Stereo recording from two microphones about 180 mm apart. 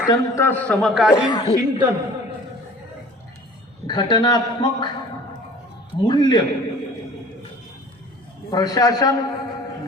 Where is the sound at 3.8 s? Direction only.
25° left (ahead or behind).